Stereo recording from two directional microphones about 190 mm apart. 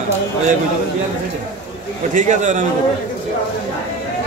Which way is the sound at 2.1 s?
40° right (ahead or behind).